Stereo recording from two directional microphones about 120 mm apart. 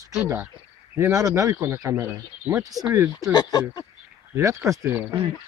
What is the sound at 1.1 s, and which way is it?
Speech, 30° right (ahead or behind).